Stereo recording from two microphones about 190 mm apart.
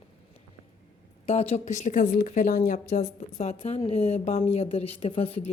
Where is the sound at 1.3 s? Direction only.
35° left (ahead or behind).